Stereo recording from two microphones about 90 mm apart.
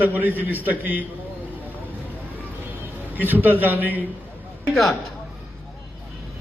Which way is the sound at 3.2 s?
20° right (ahead or behind).